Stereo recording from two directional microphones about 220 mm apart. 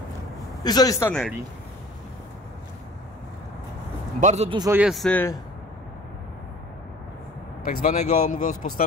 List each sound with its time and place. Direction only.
0.7 s speech: 15° left (ahead or behind)
4.2 s a man's voice: 30° right (ahead or behind)
4.6 s speech: 5° right (ahead or behind)
7.6 s speech: 35° left (ahead or behind)